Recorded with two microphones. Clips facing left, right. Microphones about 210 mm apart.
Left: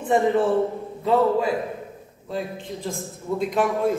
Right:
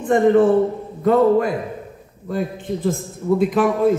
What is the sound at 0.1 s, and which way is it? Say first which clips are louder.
Speech: right 6 dB; 60° right (ahead or behind).